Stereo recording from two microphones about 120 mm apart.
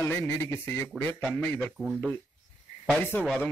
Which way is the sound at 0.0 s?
20° left (ahead or behind).